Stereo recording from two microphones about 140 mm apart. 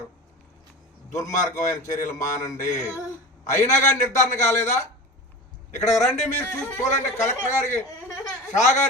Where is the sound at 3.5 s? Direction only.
60° left (ahead or behind).